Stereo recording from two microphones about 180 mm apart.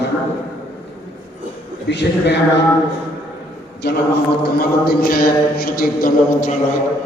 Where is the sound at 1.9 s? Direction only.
70° left (ahead or behind).